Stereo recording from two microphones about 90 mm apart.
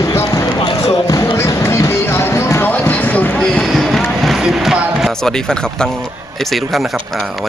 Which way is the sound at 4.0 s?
10° left (ahead or behind).